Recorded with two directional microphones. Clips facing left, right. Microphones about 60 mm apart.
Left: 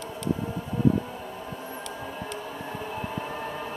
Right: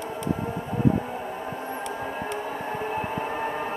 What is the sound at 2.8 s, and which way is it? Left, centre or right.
Train, right.